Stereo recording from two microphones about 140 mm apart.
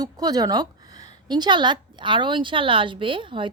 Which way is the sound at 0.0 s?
30° right (ahead or behind).